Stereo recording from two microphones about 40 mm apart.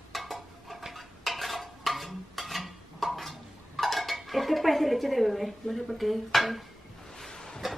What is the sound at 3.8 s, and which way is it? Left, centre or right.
Speech, centre.